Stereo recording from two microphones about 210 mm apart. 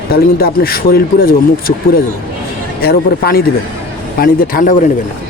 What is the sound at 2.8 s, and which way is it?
A man's voice, 45° left (ahead or behind).